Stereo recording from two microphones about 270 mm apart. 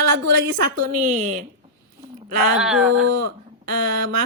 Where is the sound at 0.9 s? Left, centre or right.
Right.